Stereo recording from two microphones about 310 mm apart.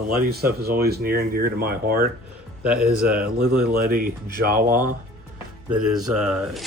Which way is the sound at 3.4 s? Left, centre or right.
Right.